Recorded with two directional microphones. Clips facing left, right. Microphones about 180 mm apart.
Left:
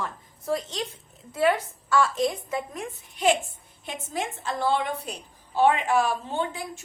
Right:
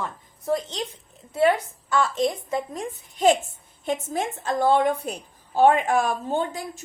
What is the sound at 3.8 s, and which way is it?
Speech, 45° right (ahead or behind).